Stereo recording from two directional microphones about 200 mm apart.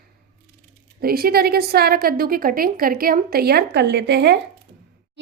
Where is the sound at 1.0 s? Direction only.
50° right (ahead or behind).